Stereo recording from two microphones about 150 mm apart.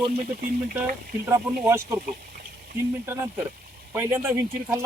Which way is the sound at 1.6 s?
15° right (ahead or behind).